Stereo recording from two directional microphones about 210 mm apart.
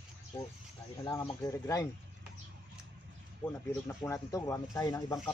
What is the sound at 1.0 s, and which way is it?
Speech, 15° left (ahead or behind).